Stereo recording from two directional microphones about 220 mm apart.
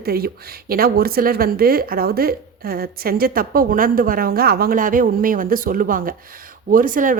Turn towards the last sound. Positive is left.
turn(degrees=-40)  # may be behind; listen again after turning